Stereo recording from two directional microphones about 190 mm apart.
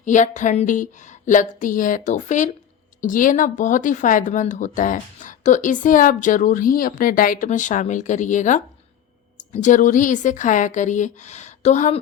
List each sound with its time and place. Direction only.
0.0 s a woman's voice: 40° left (ahead or behind)